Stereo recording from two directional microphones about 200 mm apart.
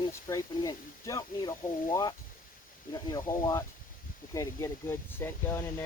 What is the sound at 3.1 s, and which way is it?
Speech, 20° left (ahead or behind).